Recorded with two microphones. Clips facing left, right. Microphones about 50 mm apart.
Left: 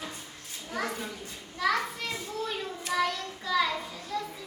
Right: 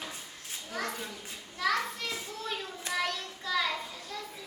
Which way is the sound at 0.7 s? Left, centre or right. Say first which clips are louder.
Left 3 dB; centre.